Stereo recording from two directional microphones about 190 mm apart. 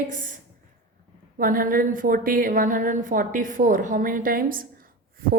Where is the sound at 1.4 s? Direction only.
45° right (ahead or behind).